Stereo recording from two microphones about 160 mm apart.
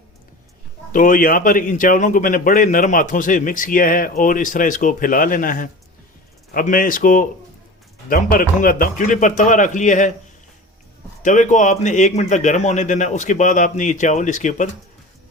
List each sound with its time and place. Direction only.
0.9 s a man's voice: 55° left (ahead or behind)
11.2 s a man's voice: 50° left (ahead or behind)